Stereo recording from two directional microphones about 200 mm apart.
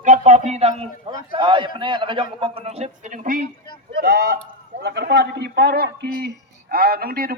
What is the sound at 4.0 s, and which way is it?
A man's voice, 55° right (ahead or behind).